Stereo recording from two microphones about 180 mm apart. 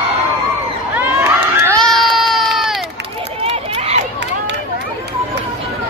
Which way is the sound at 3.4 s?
35° right (ahead or behind).